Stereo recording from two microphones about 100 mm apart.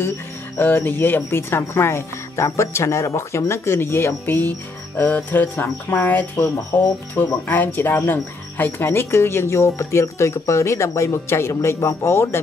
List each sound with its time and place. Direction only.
0.6 s speech: 20° left (ahead or behind)